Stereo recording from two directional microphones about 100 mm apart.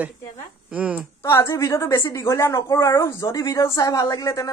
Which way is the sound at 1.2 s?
30° left (ahead or behind).